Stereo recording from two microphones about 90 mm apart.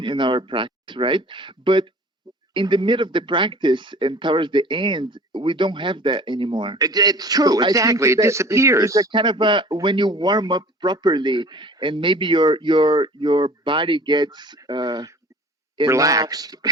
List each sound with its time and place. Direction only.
0.0 s speech: 60° right (ahead or behind)
6.7 s a man's voice: 45° right (ahead or behind)
9.1 s speech: 65° right (ahead or behind)
15.9 s a man's voice: 40° right (ahead or behind)